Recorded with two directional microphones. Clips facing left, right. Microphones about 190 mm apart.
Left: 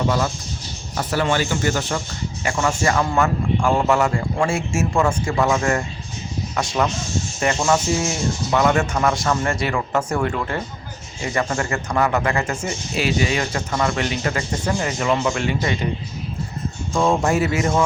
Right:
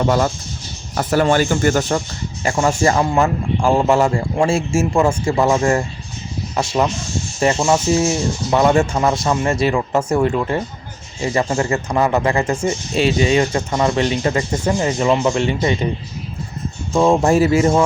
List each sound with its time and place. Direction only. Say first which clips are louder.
0.9 s speech: right 5 dB; 45° right (ahead or behind)
2.4 s a man's voice: right 5 dB; 35° right (ahead or behind)
16.9 s a man's voice: right 5 dB; 25° right (ahead or behind)